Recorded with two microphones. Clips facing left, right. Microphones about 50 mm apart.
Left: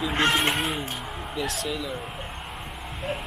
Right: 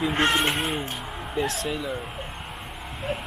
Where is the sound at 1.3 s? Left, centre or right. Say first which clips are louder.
Right 3 dB; right.